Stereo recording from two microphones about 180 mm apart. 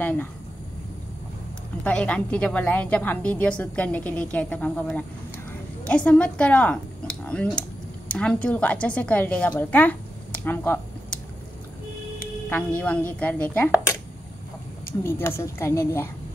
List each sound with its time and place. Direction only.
0.0 s speech: 10° left (ahead or behind)
1.9 s a woman's voice: 5° left (ahead or behind)
12.4 s a woman's voice: 10° left (ahead or behind)
15.0 s a woman's voice: 15° left (ahead or behind)